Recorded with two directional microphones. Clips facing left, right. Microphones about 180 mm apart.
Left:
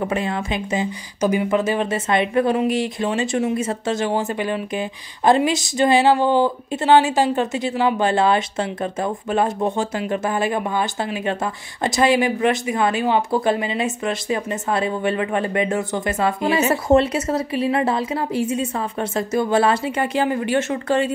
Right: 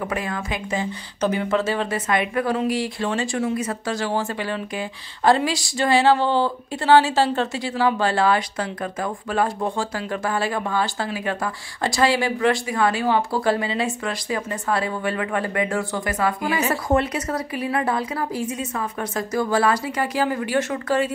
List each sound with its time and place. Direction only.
0.0 s speech: 25° left (ahead or behind)
1.2 s speech: 10° left (ahead or behind)